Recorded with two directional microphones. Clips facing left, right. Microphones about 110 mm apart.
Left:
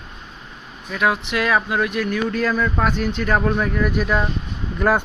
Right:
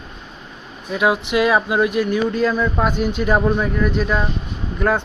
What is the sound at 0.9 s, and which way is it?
Speech, 10° right (ahead or behind).